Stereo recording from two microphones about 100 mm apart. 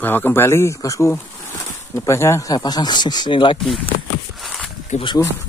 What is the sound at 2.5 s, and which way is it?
Speech, 40° left (ahead or behind).